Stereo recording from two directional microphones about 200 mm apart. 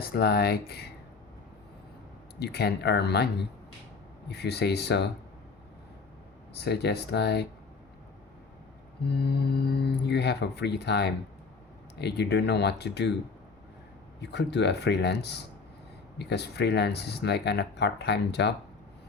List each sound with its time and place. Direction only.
0.0 s speech: 50° left (ahead or behind)
2.4 s speech: 55° left (ahead or behind)
4.3 s speech: 55° left (ahead or behind)
6.6 s speech: 55° left (ahead or behind)
9.0 s speech: 55° left (ahead or behind)
14.2 s speech: 60° left (ahead or behind)